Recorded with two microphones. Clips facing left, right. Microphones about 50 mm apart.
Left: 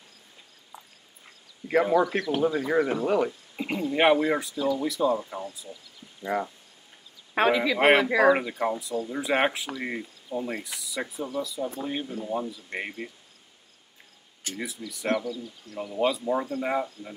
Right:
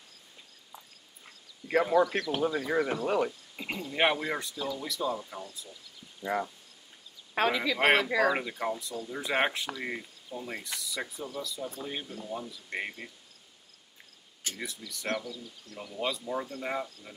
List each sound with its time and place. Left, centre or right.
1.7 s speech: left
3.6 s speech: centre
5.3 s speech: left
8.3 s speech: centre
10.8 s speech: centre
14.9 s speech: centre